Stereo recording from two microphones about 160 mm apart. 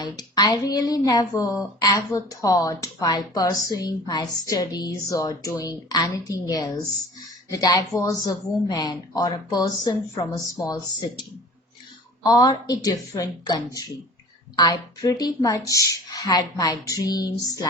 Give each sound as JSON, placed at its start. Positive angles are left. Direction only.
{"t": 0.0, "sound": "a woman's voice", "side_deg": 25}
{"t": 12.3, "sound": "a woman's voice", "side_deg": 25}